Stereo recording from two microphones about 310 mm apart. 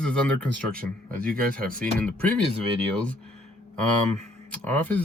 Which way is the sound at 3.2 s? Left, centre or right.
Centre.